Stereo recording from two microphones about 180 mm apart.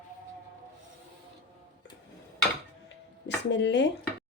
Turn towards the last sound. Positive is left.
turn(degrees=75)  # may be behind; listen again after turning